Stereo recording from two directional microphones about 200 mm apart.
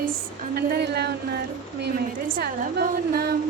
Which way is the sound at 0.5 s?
55° right (ahead or behind).